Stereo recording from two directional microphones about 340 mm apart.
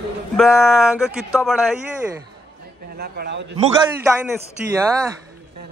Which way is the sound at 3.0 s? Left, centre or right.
Right.